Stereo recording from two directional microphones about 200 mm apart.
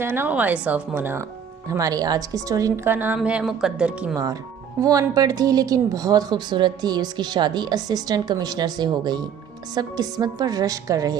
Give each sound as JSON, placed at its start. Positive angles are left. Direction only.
{"t": 0.0, "sound": "a woman's voice", "side_deg": -10}
{"t": 4.8, "sound": "speech", "side_deg": -20}